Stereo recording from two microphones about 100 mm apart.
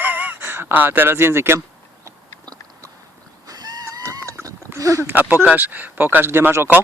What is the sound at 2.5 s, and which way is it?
Chewing, 40° right (ahead or behind).